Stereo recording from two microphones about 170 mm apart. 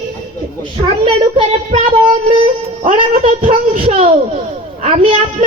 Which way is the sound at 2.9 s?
40° right (ahead or behind).